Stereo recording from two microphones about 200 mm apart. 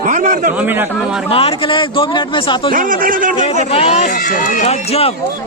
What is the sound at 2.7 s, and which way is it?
Speech, 45° right (ahead or behind).